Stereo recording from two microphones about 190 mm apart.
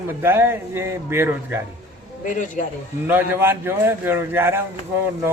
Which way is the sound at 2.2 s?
40° left (ahead or behind).